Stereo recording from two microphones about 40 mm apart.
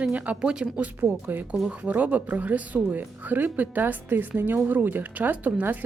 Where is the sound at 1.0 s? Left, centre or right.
Right.